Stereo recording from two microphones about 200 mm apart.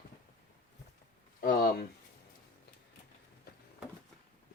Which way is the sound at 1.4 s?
45° left (ahead or behind).